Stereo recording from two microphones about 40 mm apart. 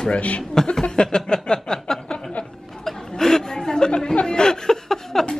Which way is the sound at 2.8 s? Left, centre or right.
Centre.